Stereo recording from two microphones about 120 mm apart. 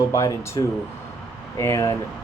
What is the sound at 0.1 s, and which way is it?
Speech, 25° left (ahead or behind).